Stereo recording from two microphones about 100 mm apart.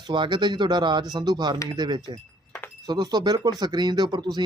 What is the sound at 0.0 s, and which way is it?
Speech, 50° right (ahead or behind).